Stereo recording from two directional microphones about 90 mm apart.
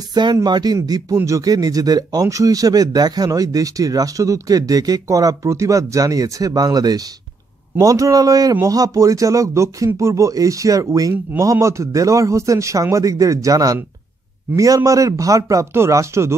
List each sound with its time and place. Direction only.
0.1 s speech: 50° right (ahead or behind)
1.1 s speech: 35° right (ahead or behind)